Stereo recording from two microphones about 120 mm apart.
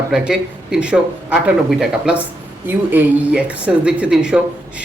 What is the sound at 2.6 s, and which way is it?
Speech, 15° right (ahead or behind).